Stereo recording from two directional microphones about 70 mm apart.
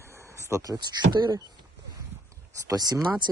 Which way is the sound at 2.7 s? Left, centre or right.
Right.